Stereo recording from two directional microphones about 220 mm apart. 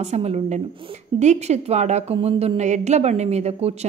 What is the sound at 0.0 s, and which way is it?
A woman's voice, 30° right (ahead or behind).